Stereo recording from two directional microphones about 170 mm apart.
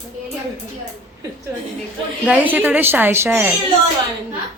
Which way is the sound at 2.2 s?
10° right (ahead or behind).